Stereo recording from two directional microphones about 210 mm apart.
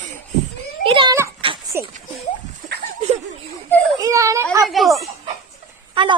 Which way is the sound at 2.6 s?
40° right (ahead or behind).